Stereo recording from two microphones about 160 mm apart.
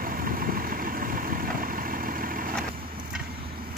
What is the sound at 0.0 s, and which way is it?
Vehicle, 60° right (ahead or behind).